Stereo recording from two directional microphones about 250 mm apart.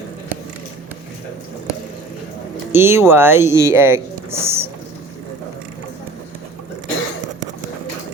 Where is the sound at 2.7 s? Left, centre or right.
Centre.